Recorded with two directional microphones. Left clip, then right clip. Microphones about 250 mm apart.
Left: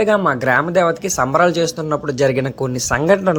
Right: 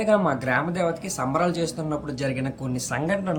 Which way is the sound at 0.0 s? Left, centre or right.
Centre.